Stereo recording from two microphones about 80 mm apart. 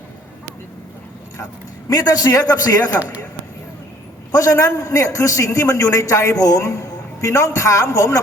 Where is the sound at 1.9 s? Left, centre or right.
Left.